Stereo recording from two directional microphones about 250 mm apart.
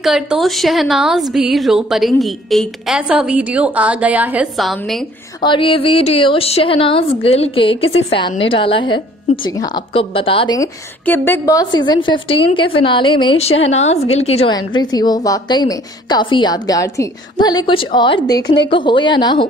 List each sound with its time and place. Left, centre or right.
0.0 s a woman's voice: centre
5.4 s a woman's voice: centre